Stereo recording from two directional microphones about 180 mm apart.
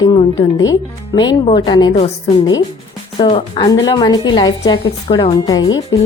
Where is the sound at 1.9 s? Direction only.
35° left (ahead or behind).